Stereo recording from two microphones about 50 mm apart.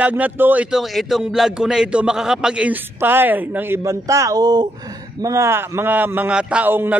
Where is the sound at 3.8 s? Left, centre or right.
Right.